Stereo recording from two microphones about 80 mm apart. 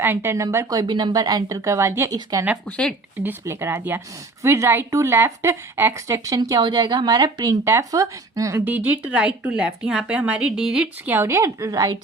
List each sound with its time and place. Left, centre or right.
0.0 s speech: right
0.9 s a woman's voice: right
2.3 s a woman's voice: right
2.6 s speech: centre
3.4 s speech: right
4.9 s a woman's voice: right
5.1 s speech: right
6.1 s a woman's voice: right
6.6 s speech: right
7.6 s speech: right
8.6 s speech: right
11.2 s speech: right